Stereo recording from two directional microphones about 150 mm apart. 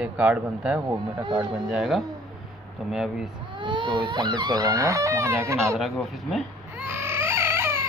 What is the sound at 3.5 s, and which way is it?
Speech, 30° right (ahead or behind).